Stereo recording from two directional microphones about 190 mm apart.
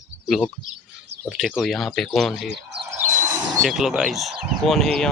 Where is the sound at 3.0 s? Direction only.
15° right (ahead or behind).